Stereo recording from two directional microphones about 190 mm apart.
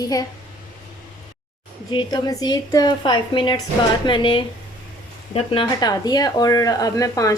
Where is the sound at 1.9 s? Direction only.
25° left (ahead or behind).